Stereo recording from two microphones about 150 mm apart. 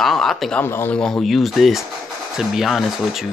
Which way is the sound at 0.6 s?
15° left (ahead or behind).